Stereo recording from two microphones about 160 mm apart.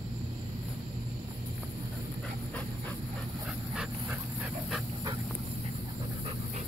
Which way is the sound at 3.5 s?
10° right (ahead or behind).